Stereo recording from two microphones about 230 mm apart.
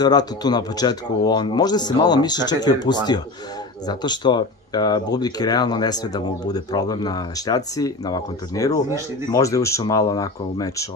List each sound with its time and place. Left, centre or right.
0.0 s speech: centre